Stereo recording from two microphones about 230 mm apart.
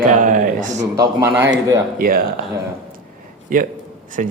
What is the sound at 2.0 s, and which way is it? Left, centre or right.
Speech, right.